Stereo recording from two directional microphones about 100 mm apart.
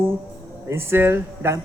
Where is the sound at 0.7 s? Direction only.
25° right (ahead or behind).